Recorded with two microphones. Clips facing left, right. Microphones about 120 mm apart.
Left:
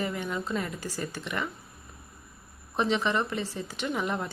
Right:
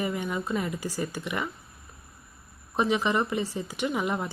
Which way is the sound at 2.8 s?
15° right (ahead or behind).